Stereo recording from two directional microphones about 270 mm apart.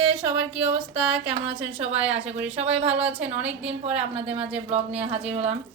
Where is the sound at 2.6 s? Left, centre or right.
Right.